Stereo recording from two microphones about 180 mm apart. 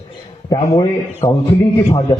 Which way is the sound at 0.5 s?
20° left (ahead or behind).